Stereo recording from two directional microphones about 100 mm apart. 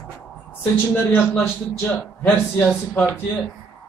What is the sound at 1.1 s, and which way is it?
A man's voice, 20° left (ahead or behind).